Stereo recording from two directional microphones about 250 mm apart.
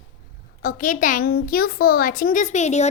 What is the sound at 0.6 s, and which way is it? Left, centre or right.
Speech, left.